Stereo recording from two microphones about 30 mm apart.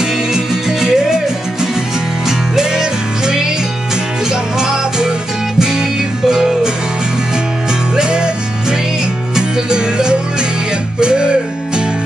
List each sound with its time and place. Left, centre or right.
0.0 s music: centre
2.2 s music: centre
7.9 s music: right